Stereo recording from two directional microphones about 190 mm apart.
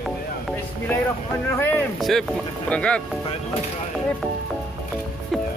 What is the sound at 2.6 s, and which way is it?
Speech, 5° left (ahead or behind).